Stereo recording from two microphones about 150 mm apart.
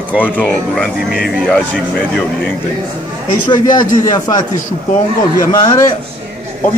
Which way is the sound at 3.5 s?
30° left (ahead or behind).